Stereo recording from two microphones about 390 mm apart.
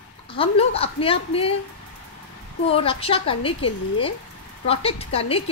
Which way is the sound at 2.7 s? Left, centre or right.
Centre.